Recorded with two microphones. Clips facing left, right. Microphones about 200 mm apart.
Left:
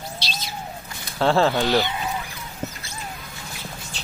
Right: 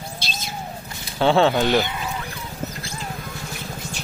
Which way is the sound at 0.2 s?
50° right (ahead or behind).